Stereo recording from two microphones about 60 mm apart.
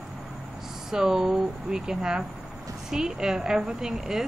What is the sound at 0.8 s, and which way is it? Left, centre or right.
Speech, centre.